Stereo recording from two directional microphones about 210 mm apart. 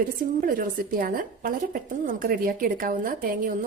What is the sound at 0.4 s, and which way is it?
A woman's voice, 40° right (ahead or behind).